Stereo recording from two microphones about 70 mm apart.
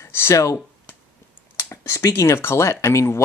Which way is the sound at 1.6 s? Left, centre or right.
Left.